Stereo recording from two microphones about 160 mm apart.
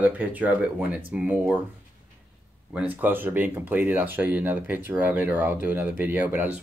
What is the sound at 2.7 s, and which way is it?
Speech, 10° right (ahead or behind).